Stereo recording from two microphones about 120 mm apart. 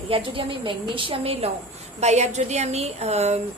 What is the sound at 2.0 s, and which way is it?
A woman's voice, 70° right (ahead or behind).